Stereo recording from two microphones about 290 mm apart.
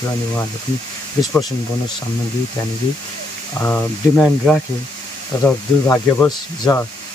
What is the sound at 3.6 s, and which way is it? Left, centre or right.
Speech, centre.